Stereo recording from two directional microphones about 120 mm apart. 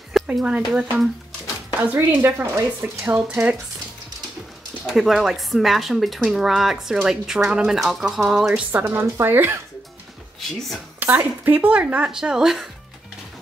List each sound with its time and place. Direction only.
0.1 s a sound: 5° right (ahead or behind)
0.7 s speech: 10° right (ahead or behind)
4.8 s speech: centre (ahead or behind)
8.7 s speech: 15° right (ahead or behind)
11.0 s speech: 15° right (ahead or behind)